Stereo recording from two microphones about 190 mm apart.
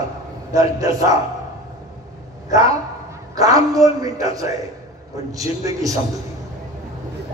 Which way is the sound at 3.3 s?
20° right (ahead or behind).